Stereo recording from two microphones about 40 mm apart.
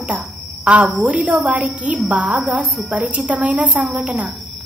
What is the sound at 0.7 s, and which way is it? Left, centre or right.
Speech, right.